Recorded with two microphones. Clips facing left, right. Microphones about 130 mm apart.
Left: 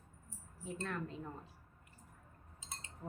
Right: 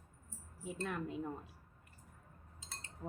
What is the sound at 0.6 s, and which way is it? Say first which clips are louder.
Speech: right 1 dB; 10° right (ahead or behind).